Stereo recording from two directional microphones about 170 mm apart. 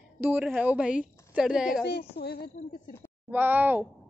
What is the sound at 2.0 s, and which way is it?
Speech, 70° left (ahead or behind).